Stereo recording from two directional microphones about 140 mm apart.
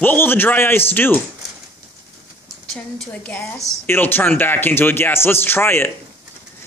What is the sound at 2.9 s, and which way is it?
A man's voice, 10° left (ahead or behind).